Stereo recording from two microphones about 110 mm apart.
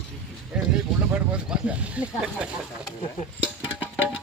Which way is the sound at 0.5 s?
5° right (ahead or behind).